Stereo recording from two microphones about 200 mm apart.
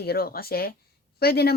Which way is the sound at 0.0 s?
50° left (ahead or behind).